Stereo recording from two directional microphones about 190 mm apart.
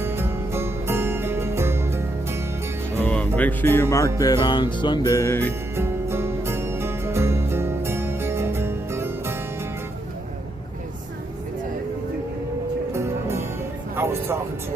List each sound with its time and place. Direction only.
0.0 s music: 10° right (ahead or behind)
3.0 s speech: 10° left (ahead or behind)
4.2 s music: 20° left (ahead or behind)
5.7 s music: 15° right (ahead or behind)
12.9 s music: 15° right (ahead or behind)